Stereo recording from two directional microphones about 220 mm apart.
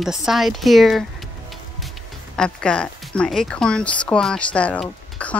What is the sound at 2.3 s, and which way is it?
Speech, 5° left (ahead or behind).